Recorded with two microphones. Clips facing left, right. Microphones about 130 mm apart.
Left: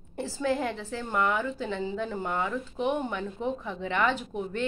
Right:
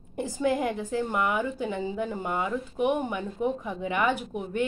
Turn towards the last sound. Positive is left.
turn(degrees=-10)  # may be behind; listen again after turning